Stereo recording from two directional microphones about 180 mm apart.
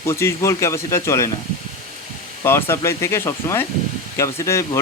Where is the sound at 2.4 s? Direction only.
15° left (ahead or behind).